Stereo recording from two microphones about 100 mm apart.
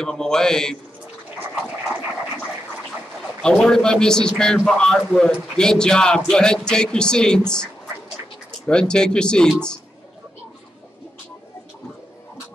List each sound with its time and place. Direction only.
0.0 s a man's voice: 5° left (ahead or behind)
1.4 s a sound: 15° right (ahead or behind)
3.4 s speech: 5° left (ahead or behind)